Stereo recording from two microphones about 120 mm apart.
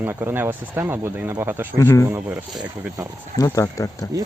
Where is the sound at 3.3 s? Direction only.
30° left (ahead or behind).